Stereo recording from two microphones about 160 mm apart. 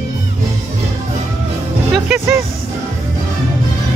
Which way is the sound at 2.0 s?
15° right (ahead or behind).